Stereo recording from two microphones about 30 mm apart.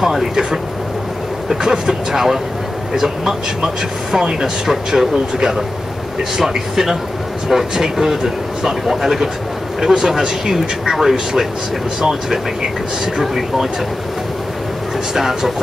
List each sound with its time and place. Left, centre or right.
0.0 s speech: centre
1.5 s speech: centre
6.3 s speech: centre
15.1 s speech: centre